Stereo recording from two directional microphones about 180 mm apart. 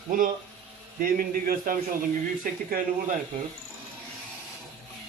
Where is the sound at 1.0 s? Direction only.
50° right (ahead or behind).